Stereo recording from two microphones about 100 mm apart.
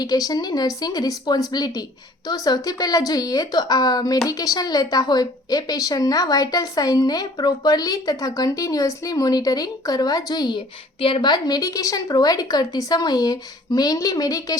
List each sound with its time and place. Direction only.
0.0 s a woman's voice: 40° left (ahead or behind)
11.0 s a woman's voice: 55° left (ahead or behind); by 14.6 s 35° left (ahead or behind)